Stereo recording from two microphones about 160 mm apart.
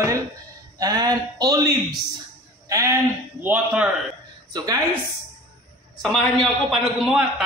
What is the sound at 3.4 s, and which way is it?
Speech, 10° right (ahead or behind).